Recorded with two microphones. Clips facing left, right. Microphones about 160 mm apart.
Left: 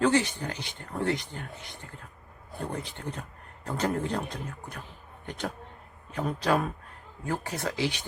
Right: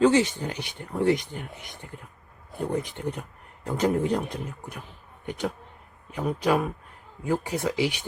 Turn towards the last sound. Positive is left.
turn(degrees=-15)  # may be behind; listen again after turning